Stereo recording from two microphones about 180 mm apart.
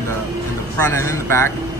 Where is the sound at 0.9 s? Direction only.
15° left (ahead or behind).